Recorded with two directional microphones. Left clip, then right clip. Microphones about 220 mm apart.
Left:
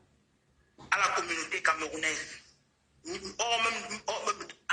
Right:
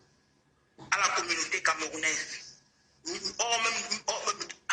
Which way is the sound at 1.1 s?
15° left (ahead or behind).